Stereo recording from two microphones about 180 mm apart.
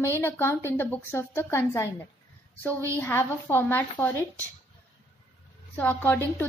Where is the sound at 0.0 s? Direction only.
15° left (ahead or behind).